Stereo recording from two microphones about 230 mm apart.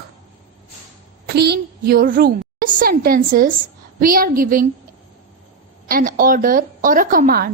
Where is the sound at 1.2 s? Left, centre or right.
Right.